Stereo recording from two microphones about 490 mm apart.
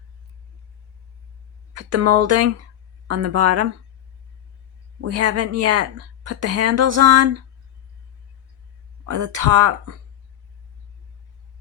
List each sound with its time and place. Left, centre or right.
1.7 s a woman's voice: right
4.9 s a woman's voice: right
9.0 s speech: right